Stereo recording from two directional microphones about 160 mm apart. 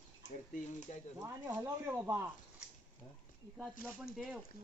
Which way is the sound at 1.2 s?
20° right (ahead or behind).